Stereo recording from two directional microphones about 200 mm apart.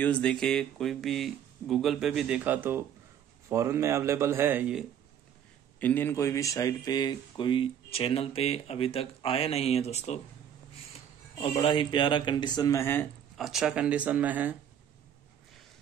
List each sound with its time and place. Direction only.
0.0 s speech: 5° left (ahead or behind)
5.8 s speech: 10° left (ahead or behind); by 10.2 s 35° left (ahead or behind)
11.3 s speech: 25° left (ahead or behind)
13.4 s speech: centre (ahead or behind)